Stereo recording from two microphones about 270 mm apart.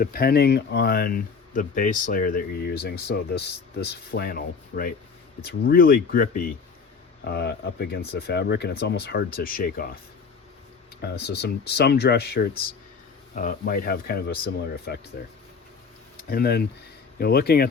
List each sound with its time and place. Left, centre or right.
0.0 s speech: left
11.0 s speech: left
16.3 s speech: left